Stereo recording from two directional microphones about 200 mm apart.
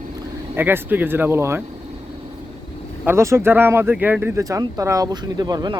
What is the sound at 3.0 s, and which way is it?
Speech, 15° right (ahead or behind).